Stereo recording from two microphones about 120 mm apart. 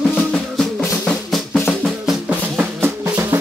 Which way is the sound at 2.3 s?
20° right (ahead or behind).